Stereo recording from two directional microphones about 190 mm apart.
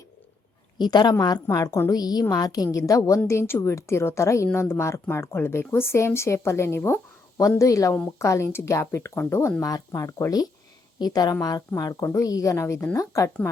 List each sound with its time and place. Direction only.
0.8 s a woman's voice: 20° left (ahead or behind)